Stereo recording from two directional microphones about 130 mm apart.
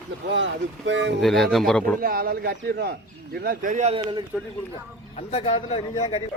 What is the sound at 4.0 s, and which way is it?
Speech, 35° right (ahead or behind).